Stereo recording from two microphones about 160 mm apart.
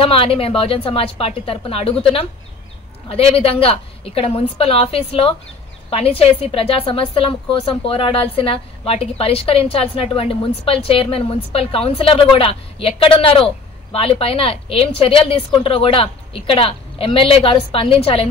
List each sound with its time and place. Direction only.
0.0 s a woman's voice: 35° left (ahead or behind)